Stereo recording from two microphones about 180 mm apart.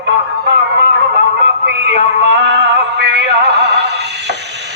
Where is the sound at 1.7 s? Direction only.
75° right (ahead or behind).